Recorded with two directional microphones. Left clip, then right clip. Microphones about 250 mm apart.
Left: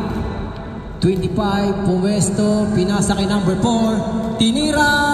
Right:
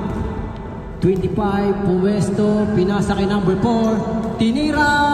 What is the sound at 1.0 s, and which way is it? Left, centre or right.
Music, left.